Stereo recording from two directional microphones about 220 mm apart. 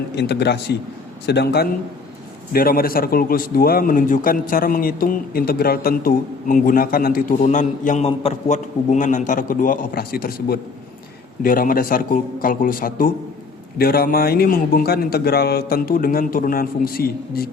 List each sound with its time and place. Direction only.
0.2 s a man's voice: 50° left (ahead or behind)